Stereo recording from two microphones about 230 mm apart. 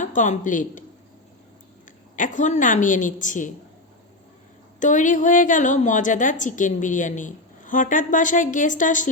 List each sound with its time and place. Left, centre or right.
0.0 s speech: left
2.1 s a woman's voice: left
4.8 s a woman's voice: left